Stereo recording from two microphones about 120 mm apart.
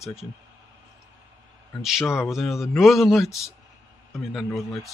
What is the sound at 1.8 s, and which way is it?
Speech, centre (ahead or behind).